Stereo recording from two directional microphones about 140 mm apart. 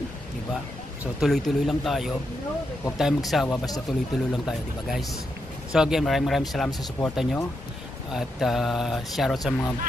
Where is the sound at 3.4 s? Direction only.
25° left (ahead or behind).